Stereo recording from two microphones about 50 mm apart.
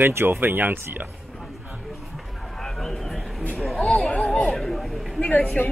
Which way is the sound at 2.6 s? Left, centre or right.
Centre.